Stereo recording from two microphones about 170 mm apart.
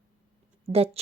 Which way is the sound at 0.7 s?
35° right (ahead or behind).